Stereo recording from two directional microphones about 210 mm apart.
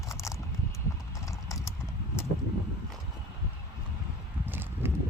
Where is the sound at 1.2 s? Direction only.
15° left (ahead or behind).